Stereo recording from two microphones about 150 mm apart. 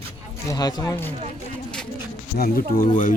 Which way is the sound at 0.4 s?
25° left (ahead or behind).